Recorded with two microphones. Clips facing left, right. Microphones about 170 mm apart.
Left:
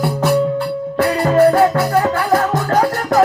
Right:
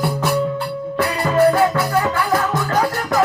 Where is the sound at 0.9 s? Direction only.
45° left (ahead or behind).